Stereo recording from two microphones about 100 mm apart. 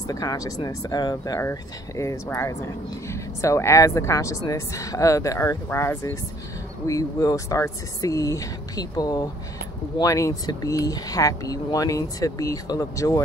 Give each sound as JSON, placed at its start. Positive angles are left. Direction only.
{"t": 0.1, "sound": "speech", "side_deg": 35}
{"t": 1.4, "sound": "speech", "side_deg": 30}
{"t": 6.9, "sound": "speech", "side_deg": 35}